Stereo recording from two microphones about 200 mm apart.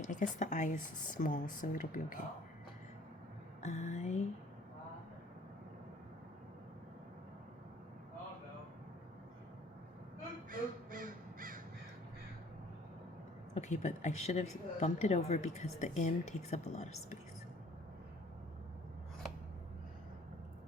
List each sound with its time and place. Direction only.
0.0 s speech: 40° left (ahead or behind)
3.6 s speech: 35° left (ahead or behind)
10.5 s crow: 45° right (ahead or behind)
13.5 s speech: 35° left (ahead or behind)